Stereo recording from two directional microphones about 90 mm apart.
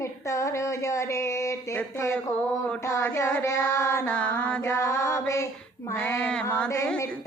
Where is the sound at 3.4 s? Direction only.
35° left (ahead or behind).